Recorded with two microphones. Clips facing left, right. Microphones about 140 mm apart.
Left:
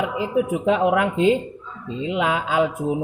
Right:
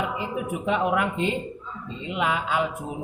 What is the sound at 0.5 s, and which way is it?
Speech, 90° left.